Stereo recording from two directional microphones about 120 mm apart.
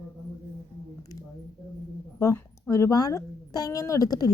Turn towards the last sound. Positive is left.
turn(degrees=30)  # may be behind; listen again after turning